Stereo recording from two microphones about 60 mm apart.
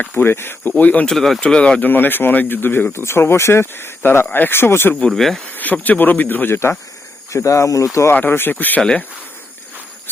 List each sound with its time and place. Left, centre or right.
0.0 s speech: left
0.3 s speech: left
0.8 s speech: left
1.0 s speech: centre
1.4 s speech: centre
1.8 s speech: left
2.9 s speech: left
4.9 s speech: centre
5.5 s speech: left
7.3 s speech: left
8.1 s speech: left